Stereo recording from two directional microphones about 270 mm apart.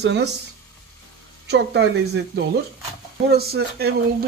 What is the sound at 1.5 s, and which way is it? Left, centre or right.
Speech, right.